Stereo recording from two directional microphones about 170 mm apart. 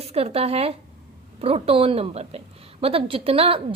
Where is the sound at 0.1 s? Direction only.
35° right (ahead or behind).